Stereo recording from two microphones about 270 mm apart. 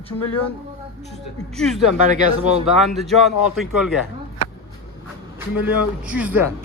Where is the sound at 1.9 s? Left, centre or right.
Right.